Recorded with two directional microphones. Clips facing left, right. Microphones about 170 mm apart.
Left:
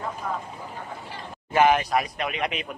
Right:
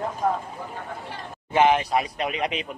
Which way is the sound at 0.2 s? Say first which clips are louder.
Right 8 dB; 50° right (ahead or behind).